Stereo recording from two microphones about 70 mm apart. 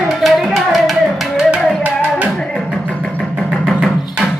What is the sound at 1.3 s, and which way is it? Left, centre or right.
Music, centre.